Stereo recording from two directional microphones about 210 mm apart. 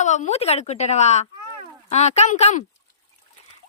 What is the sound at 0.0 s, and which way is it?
Speech, 35° left (ahead or behind).